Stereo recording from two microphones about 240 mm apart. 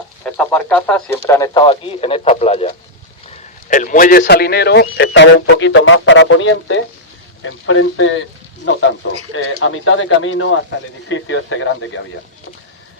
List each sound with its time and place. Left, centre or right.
0.3 s a man's voice: centre; by 8.2 s left
9.3 s speech: left